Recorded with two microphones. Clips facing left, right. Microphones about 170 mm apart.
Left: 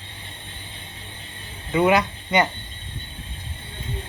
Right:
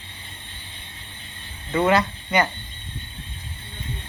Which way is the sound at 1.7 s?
15° left (ahead or behind).